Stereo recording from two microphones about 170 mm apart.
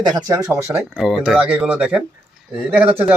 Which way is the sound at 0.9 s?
Centre (ahead or behind).